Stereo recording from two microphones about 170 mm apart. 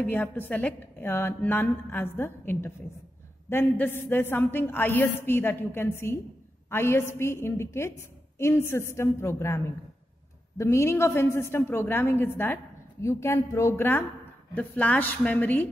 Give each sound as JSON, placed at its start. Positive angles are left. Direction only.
{"t": 0.0, "sound": "a woman's voice", "side_deg": 10}
{"t": 10.6, "sound": "a woman's voice", "side_deg": 15}